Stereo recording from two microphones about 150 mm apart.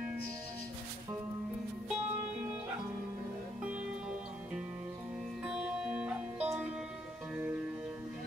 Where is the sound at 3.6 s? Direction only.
5° right (ahead or behind).